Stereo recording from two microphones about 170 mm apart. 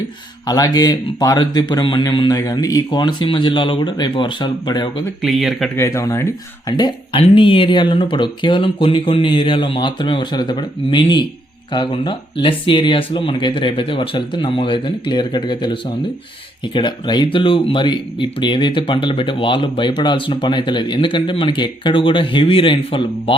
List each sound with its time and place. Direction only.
0.4 s speech: 20° left (ahead or behind)
5.2 s speech: centre (ahead or behind)
5.7 s speech: 15° left (ahead or behind)